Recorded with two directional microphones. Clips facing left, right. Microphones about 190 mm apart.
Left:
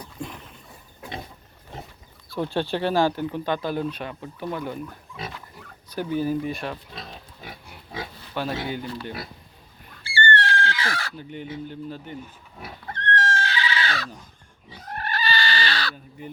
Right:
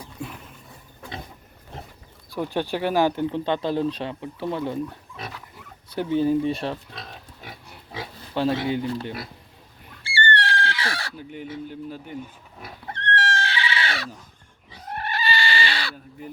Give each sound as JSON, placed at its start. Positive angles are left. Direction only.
{"t": 0.0, "sound": "a sound", "side_deg": -5}
{"t": 2.3, "sound": "speech", "side_deg": -15}
{"t": 5.1, "sound": "pig", "side_deg": 5}
{"t": 5.9, "sound": "speech", "side_deg": -25}
{"t": 8.3, "sound": "speech", "side_deg": -25}
{"t": 10.0, "sound": "fowl", "side_deg": -30}
{"t": 11.2, "sound": "speech", "side_deg": -5}
{"t": 12.8, "sound": "goat", "side_deg": -25}
{"t": 14.9, "sound": "chicken", "side_deg": -25}